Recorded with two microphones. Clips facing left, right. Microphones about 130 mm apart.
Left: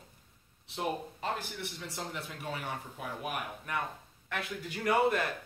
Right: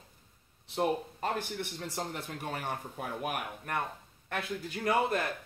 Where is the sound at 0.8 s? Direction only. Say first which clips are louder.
Right 4 dB; 45° right (ahead or behind).